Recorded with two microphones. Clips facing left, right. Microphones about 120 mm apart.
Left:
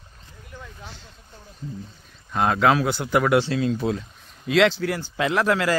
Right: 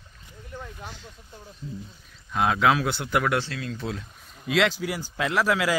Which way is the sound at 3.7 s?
5° left (ahead or behind).